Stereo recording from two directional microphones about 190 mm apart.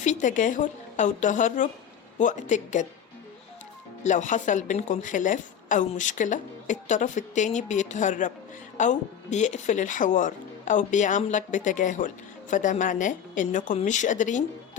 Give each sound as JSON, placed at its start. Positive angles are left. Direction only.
{"t": 0.0, "sound": "speech", "side_deg": 40}
{"t": 4.0, "sound": "speech", "side_deg": 40}